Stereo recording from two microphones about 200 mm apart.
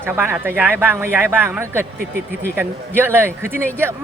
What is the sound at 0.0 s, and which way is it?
Speech, 10° right (ahead or behind).